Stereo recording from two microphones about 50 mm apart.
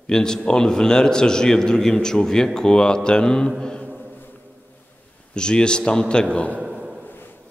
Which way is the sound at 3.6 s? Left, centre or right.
Centre.